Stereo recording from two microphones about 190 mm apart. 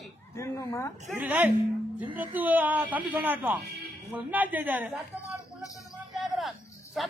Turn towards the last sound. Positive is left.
turn(degrees=0)  # may be behind; listen again after turning